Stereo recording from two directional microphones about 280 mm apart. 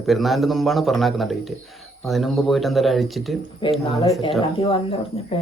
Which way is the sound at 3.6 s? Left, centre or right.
Centre.